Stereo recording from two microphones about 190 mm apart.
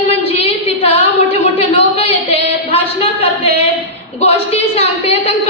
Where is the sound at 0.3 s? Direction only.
35° left (ahead or behind).